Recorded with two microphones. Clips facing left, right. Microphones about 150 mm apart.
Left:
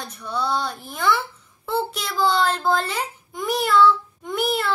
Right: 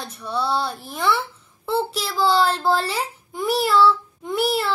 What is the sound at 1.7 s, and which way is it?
A child's voice, 5° right (ahead or behind).